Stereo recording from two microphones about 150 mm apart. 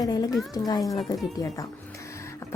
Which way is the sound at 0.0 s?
25° left (ahead or behind).